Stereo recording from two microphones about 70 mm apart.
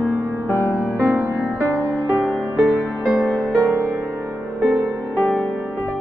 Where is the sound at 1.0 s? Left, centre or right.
Right.